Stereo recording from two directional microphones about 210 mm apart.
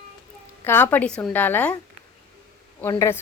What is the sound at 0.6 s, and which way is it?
Speech, 10° left (ahead or behind).